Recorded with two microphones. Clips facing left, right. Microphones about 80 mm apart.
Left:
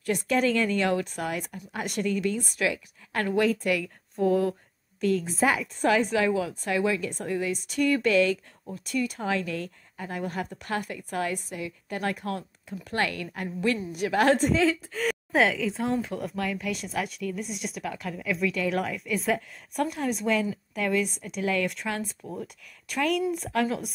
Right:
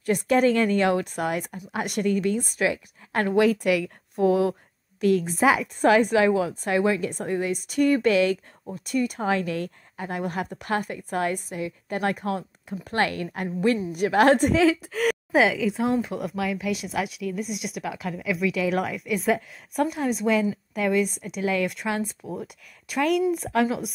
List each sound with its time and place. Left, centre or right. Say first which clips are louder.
0.0 s a woman's voice: right 4 dB; right
3.6 s a woman's voice: right 4 dB; centre
5.8 s a woman's voice: right 4 dB; right
6.0 s a woman's voice: right 4 dB; centre
6.6 s a woman's voice: right 3 dB; right
13.9 s a woman's voice: right 4 dB; right
14.5 s a woman's voice: right 4 dB; right
15.3 s speech: right 2 dB; centre